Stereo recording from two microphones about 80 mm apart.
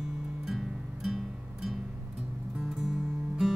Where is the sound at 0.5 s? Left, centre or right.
Centre.